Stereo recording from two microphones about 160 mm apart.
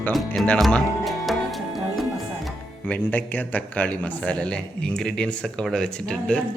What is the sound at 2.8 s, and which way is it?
A man's voice, 10° left (ahead or behind).